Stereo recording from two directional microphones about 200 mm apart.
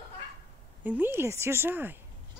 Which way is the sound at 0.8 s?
10° right (ahead or behind).